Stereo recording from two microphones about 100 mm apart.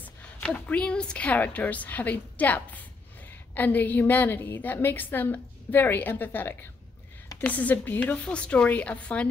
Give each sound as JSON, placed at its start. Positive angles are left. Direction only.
{"t": 0.5, "sound": "a woman's voice", "side_deg": 10}